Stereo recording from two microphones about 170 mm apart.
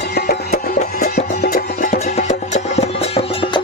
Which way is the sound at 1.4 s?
60° left (ahead or behind).